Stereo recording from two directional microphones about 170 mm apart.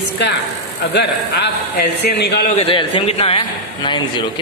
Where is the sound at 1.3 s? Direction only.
70° left (ahead or behind).